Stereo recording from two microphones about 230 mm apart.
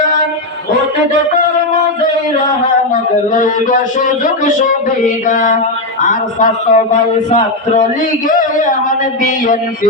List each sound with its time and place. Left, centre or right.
2.9 s speech: left
5.3 s speech: left